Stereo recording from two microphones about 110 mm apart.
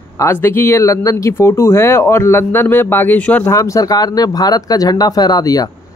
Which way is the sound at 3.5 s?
30° left (ahead or behind).